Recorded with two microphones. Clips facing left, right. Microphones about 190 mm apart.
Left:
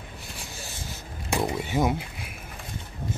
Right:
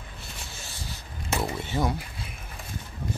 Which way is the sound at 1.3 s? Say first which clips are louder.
Left 3 dB; 15° left (ahead or behind).